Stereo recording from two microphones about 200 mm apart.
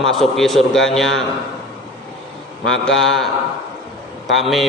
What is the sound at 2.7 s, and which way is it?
Speech, 70° left (ahead or behind).